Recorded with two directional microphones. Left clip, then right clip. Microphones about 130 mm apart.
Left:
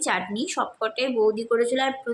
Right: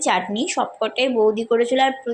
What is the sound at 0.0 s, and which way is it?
A woman's voice, 20° right (ahead or behind).